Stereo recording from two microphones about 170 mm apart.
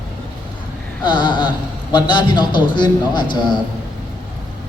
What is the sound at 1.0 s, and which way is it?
A man's voice, 25° left (ahead or behind).